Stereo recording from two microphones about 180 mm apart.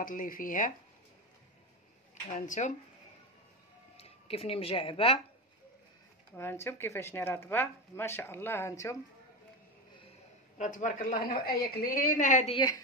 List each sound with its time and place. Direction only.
0.0 s a woman's voice: 50° left (ahead or behind)
2.3 s a woman's voice: 45° left (ahead or behind)
3.9 s speech: 35° left (ahead or behind)
6.3 s speech: 15° left (ahead or behind)
10.6 s a woman's voice: 45° left (ahead or behind)